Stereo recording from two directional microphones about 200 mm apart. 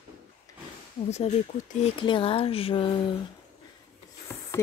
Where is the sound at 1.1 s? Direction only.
35° left (ahead or behind).